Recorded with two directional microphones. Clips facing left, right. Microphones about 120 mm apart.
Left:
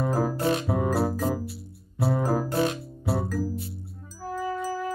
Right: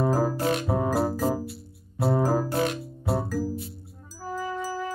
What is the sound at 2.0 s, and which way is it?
Music, 35° right (ahead or behind).